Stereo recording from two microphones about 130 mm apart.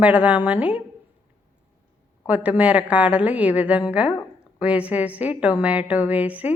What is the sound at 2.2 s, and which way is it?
A woman's voice, 10° right (ahead or behind).